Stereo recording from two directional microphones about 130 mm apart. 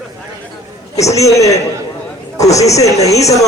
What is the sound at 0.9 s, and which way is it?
Music, 25° left (ahead or behind).